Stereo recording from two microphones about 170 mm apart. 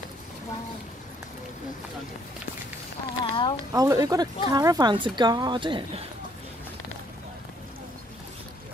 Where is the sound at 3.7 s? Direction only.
20° right (ahead or behind).